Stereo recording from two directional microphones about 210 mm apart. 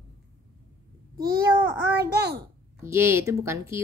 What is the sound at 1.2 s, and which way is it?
Speech, 15° right (ahead or behind).